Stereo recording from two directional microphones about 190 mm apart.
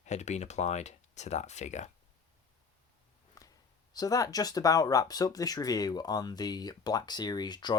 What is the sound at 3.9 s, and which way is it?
Speech, 20° left (ahead or behind).